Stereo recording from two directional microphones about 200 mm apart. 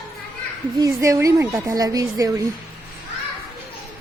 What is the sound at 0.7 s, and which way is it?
A woman's voice, 15° right (ahead or behind).